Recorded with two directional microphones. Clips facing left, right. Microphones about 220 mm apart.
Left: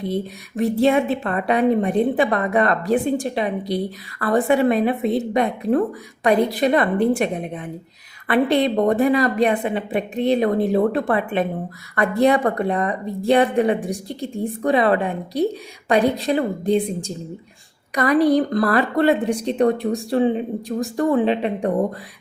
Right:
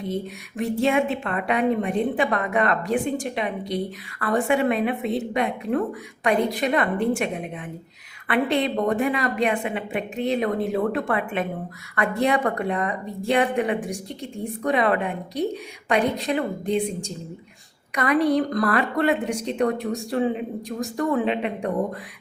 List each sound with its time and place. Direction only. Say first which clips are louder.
0.0 s a woman's voice: left 4 dB; 35° left (ahead or behind)